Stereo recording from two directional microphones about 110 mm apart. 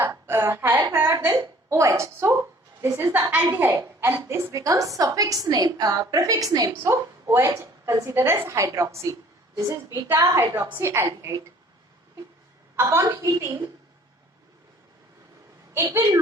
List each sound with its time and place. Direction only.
0.0 s a woman's voice: 20° right (ahead or behind)
12.7 s a woman's voice: 25° right (ahead or behind)
15.7 s a woman's voice: 25° right (ahead or behind)